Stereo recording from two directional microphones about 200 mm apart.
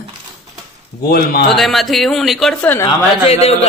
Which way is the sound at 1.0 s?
50° left (ahead or behind).